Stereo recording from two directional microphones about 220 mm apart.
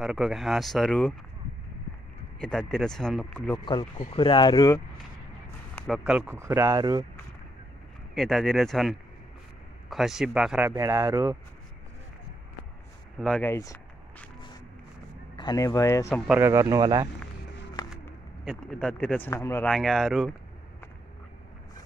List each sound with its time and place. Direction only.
0.0 s speech: centre (ahead or behind)
2.7 s speech: centre (ahead or behind)
3.5 s speech: 20° left (ahead or behind)
5.8 s speech: centre (ahead or behind)
8.1 s speech: centre (ahead or behind)
13.2 s speech: 5° left (ahead or behind)
15.3 s speech: 20° left (ahead or behind)
16.3 s speech: 10° right (ahead or behind)
17.8 s a sound: 20° left (ahead or behind)
18.4 s speech: centre (ahead or behind)